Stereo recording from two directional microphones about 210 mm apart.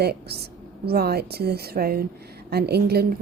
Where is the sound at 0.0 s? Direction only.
50° right (ahead or behind).